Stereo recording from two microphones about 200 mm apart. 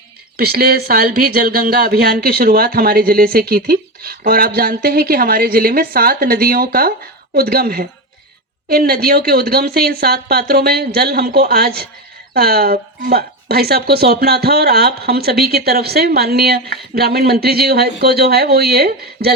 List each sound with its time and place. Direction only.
0.3 s speech: 50° right (ahead or behind)